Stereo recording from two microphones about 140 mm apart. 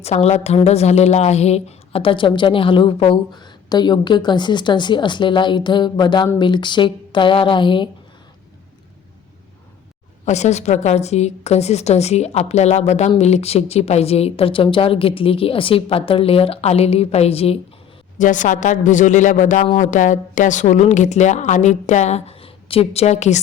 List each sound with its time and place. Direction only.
0.0 s a woman's voice: 50° left (ahead or behind)
10.2 s a woman's voice: 55° left (ahead or behind)
18.2 s a woman's voice: 65° left (ahead or behind)